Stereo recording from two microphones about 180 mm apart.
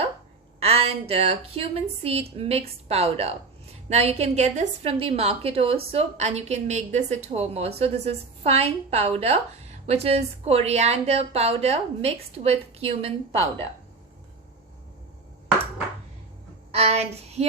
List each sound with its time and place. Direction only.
0.6 s a woman's voice: 35° right (ahead or behind)
16.7 s a woman's voice: 35° right (ahead or behind)